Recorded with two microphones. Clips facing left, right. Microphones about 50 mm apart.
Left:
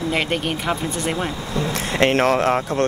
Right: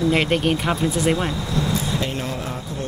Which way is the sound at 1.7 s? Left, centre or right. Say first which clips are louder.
Left 5 dB; left.